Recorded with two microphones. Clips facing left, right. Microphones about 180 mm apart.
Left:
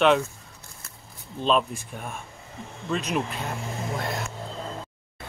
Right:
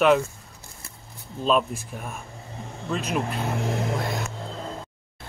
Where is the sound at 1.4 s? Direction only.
5° right (ahead or behind).